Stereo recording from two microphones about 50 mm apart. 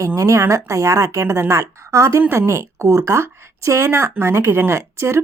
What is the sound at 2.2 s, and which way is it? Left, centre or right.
Speech, right.